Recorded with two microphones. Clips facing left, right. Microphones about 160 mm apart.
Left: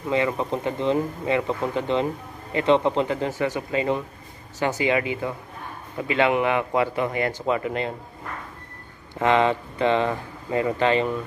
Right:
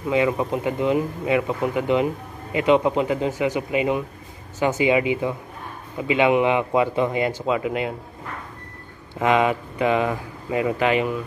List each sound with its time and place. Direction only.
0.1 s speech: 15° right (ahead or behind)
9.2 s speech: 15° right (ahead or behind)